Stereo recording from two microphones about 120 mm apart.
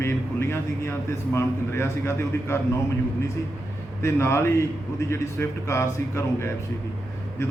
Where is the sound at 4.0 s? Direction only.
25° left (ahead or behind).